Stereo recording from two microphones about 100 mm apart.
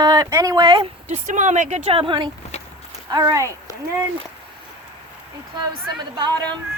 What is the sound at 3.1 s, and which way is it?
Speech, 35° right (ahead or behind).